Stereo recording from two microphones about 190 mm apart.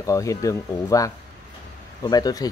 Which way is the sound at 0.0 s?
15° left (ahead or behind).